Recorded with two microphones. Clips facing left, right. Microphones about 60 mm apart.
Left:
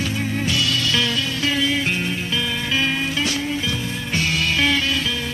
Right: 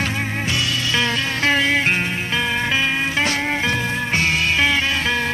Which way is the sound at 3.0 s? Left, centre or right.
Right.